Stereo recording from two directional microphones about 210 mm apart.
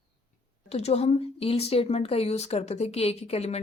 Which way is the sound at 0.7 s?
30° left (ahead or behind).